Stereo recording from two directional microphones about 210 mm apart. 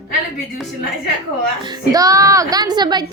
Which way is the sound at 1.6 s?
20° right (ahead or behind).